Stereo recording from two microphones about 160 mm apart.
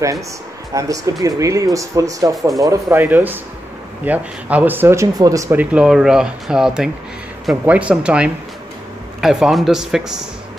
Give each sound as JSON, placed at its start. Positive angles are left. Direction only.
{"t": 0.7, "sound": "a man's voice", "side_deg": -20}